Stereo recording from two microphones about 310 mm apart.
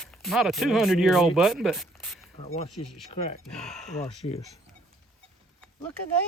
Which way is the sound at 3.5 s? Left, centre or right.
Centre.